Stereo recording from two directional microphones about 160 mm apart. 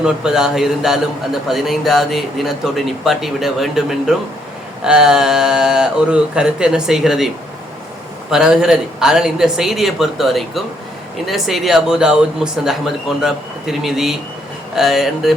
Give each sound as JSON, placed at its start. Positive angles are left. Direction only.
{"t": 0.0, "sound": "speech", "side_deg": -5}
{"t": 8.3, "sound": "speech", "side_deg": -5}